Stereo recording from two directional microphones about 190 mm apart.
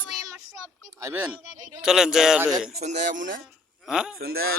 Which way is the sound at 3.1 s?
45° right (ahead or behind).